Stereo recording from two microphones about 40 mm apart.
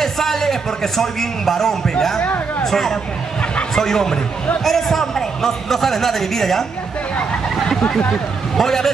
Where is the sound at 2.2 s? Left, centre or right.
Left.